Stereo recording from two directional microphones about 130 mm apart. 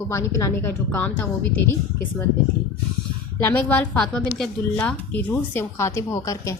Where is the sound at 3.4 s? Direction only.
15° left (ahead or behind).